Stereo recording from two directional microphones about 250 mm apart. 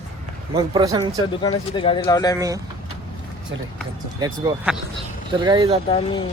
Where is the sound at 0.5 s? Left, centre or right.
Centre.